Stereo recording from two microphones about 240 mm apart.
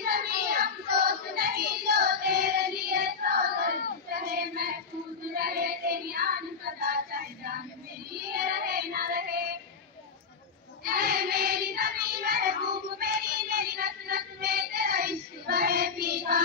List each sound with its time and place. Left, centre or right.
0.0 s child singing: right
10.8 s child singing: right